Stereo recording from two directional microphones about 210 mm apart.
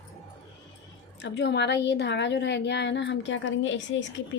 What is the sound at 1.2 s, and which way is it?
A woman's voice, 55° left (ahead or behind).